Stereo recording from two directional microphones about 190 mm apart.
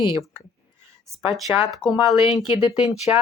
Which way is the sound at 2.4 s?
25° left (ahead or behind).